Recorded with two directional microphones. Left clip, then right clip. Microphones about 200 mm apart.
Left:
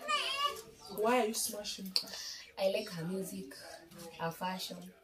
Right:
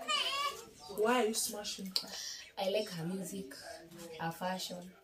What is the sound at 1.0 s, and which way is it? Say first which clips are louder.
Speech: even; centre (ahead or behind).